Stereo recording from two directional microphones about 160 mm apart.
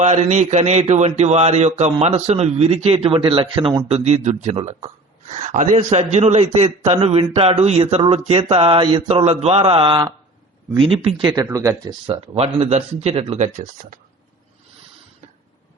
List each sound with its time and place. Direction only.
0.0 s a man's voice: 45° right (ahead or behind)
11.4 s speech: 20° right (ahead or behind)
12.0 s speech: 35° right (ahead or behind)